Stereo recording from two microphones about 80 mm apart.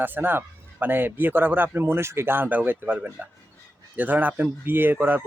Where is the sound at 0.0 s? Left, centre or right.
Right.